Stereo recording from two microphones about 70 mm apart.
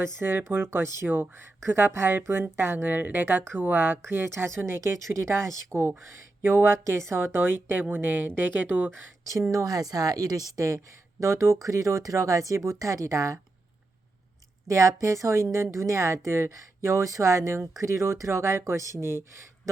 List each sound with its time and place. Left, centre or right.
0.0 s a woman's voice: right
9.5 s a woman's voice: right
14.7 s a woman's voice: right